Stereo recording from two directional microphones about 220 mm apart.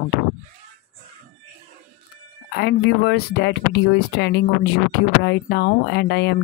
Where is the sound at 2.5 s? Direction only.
50° left (ahead or behind).